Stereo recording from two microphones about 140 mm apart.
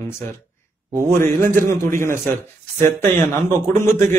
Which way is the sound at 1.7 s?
20° left (ahead or behind).